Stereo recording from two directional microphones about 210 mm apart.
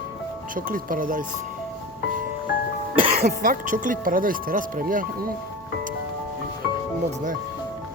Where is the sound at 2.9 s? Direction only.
40° right (ahead or behind).